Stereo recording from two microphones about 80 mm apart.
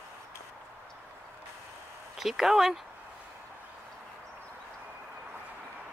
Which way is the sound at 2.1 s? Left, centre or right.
Centre.